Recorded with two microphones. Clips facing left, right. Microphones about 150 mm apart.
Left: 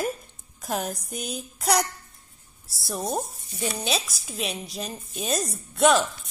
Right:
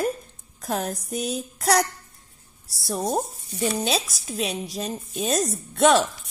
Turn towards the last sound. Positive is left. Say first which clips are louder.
# right 2 dB
turn(degrees=0)  # may be behind; listen again after turning